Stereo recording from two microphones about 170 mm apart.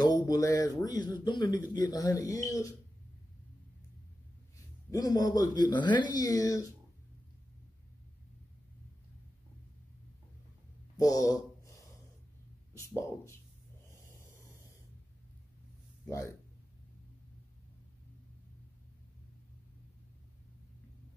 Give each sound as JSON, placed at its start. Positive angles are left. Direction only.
{"t": 0.0, "sound": "speech", "side_deg": 25}
{"t": 4.9, "sound": "speech", "side_deg": 20}
{"t": 11.0, "sound": "a man's voice", "side_deg": 20}
{"t": 12.7, "sound": "speech", "side_deg": 15}
{"t": 13.8, "sound": "snort", "side_deg": 15}
{"t": 16.1, "sound": "speech", "side_deg": 15}